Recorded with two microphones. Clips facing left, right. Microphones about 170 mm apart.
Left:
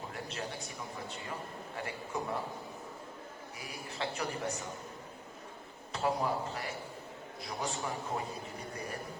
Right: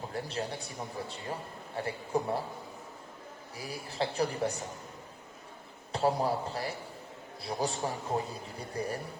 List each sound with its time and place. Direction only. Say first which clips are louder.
0.1 s a man's voice: right 7 dB; 35° right (ahead or behind)
3.6 s a man's voice: right 5 dB; 35° right (ahead or behind)
5.9 s a man's voice: right 4 dB; 35° right (ahead or behind)